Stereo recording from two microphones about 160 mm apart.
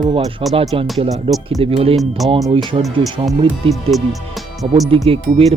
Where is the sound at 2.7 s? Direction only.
35° right (ahead or behind).